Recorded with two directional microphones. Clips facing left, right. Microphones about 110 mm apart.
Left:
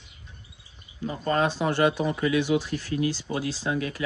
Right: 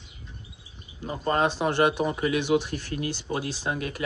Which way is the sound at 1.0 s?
30° right (ahead or behind).